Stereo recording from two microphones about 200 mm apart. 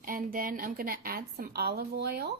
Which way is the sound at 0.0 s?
45° right (ahead or behind).